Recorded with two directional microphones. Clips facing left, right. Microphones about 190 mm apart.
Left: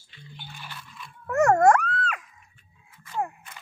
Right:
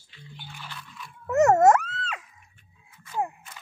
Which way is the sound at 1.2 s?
20° right (ahead or behind).